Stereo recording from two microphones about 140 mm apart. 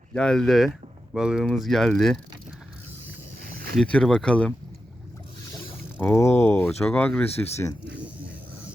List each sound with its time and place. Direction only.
0.1 s speech: 5° left (ahead or behind)
3.4 s a sound: 90° right
3.8 s speech: 5° left (ahead or behind)
6.0 s speech: 15° left (ahead or behind)
7.5 s speech: 20° left (ahead or behind)